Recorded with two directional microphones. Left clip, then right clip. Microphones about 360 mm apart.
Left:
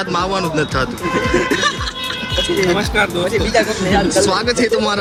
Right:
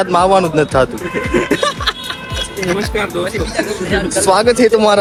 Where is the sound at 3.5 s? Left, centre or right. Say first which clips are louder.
Left 3 dB; left.